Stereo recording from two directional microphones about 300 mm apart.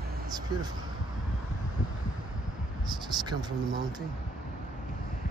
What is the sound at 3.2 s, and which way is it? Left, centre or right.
Speech, centre.